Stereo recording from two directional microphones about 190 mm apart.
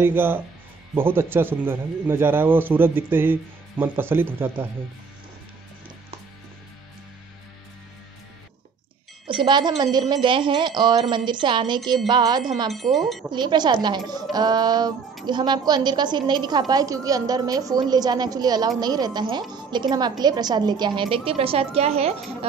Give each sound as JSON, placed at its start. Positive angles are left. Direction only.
{"t": 0.0, "sound": "a man's voice", "side_deg": -10}
{"t": 9.3, "sound": "a woman's voice", "side_deg": -25}
{"t": 12.7, "sound": "speech", "side_deg": 0}
{"t": 13.3, "sound": "a woman's voice", "side_deg": -25}